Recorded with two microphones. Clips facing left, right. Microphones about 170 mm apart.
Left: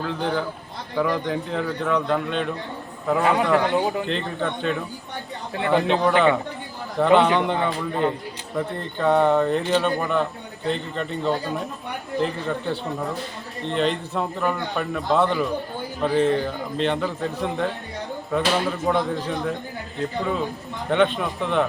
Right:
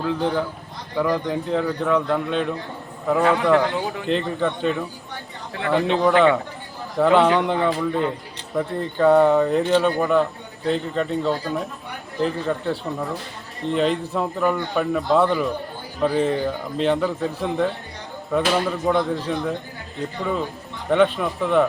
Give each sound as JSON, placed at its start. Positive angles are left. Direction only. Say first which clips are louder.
{"t": 0.0, "sound": "a man's voice", "louder": "right 3 dB", "side_deg": 0}
{"t": 20.9, "sound": "a man's voice", "louder": "right 2 dB", "side_deg": 0}